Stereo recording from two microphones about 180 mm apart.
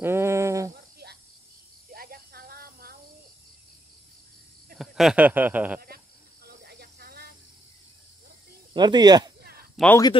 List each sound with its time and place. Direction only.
0.0 s a sound: 15° right (ahead or behind)
1.0 s snake: 65° right (ahead or behind)
1.9 s snake: 55° right (ahead or behind)
4.7 s speech: centre (ahead or behind)
6.4 s snake: 65° right (ahead or behind)
8.7 s speech: 25° right (ahead or behind)
9.8 s speech: centre (ahead or behind)